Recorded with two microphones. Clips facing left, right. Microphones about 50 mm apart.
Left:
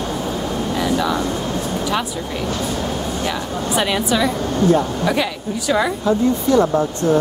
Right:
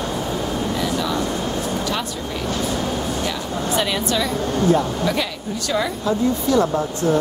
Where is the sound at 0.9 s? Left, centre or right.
Centre.